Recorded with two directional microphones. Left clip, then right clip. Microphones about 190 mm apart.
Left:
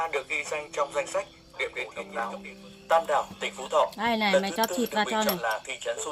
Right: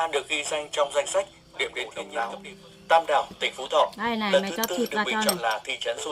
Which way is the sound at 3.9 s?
55° left (ahead or behind).